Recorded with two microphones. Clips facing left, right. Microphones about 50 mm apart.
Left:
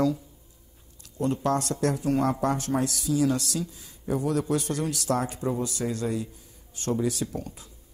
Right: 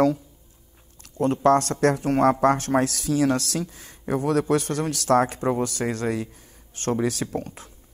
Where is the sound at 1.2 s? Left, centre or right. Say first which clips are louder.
Right 7 dB; right.